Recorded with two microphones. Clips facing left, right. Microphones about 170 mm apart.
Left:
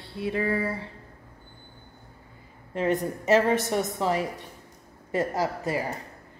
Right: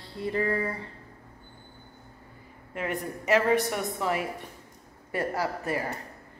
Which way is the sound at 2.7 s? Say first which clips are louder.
Left 6 dB; 25° left (ahead or behind).